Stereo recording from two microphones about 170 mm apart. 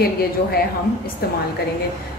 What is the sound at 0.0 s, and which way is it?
A woman's voice, 65° left (ahead or behind).